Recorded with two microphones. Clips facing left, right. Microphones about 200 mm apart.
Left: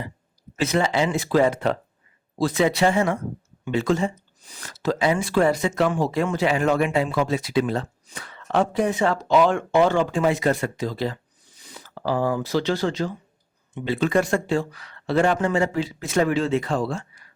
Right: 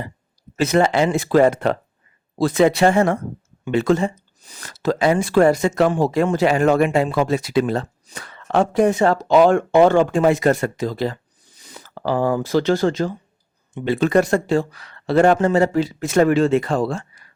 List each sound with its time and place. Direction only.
0.6 s speech: 50° right (ahead or behind)
12.0 s speech: 55° right (ahead or behind)